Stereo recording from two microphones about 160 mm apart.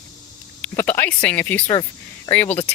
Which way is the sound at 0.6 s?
10° left (ahead or behind).